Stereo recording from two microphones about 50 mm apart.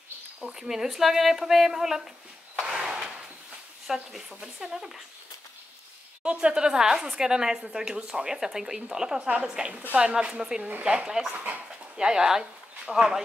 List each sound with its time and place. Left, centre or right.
0.4 s a woman's voice: centre
2.8 s drawer open or close: centre
3.8 s a woman's voice: centre
6.2 s a woman's voice: centre
11.3 s speech: right
12.0 s speech: centre